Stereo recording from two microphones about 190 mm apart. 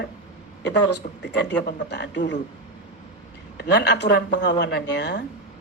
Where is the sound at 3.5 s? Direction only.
65° left (ahead or behind).